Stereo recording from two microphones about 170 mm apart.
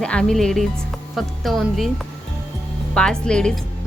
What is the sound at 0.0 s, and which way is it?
A woman's voice, 5° left (ahead or behind).